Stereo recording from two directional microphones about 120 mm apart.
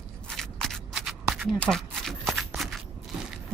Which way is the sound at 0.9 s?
5° right (ahead or behind).